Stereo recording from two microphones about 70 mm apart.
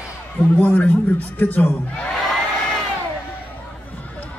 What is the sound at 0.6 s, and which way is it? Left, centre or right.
A man's voice, centre.